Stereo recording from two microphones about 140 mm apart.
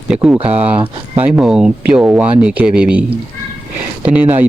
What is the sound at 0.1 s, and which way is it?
Speech, 10° right (ahead or behind).